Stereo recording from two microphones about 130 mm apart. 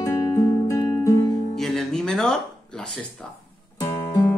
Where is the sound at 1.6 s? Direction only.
Centre (ahead or behind).